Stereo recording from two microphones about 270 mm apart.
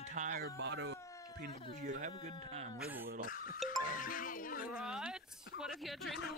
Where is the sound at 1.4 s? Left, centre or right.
Right.